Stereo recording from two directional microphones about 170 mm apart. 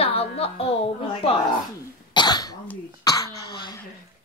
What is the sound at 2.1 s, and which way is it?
Cough, 25° left (ahead or behind).